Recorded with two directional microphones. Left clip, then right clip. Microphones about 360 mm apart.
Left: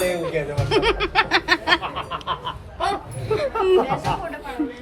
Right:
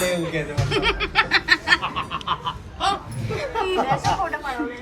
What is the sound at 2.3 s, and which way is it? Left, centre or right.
Honk, centre.